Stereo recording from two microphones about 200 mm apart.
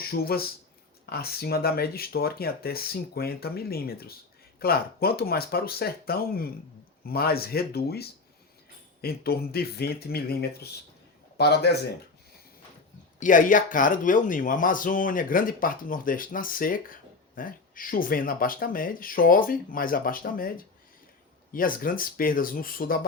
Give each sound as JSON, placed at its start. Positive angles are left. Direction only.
{"t": 0.0, "sound": "speech", "side_deg": 50}
{"t": 13.1, "sound": "speech", "side_deg": 40}